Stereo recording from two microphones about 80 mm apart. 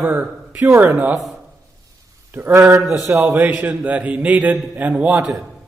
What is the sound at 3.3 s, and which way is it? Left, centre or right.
A man's voice, centre.